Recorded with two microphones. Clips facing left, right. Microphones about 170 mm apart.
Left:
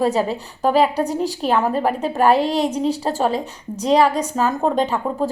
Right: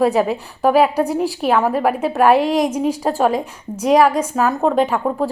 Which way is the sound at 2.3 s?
35° left (ahead or behind).